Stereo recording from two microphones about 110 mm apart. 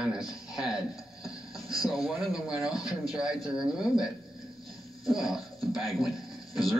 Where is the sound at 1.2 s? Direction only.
30° left (ahead or behind).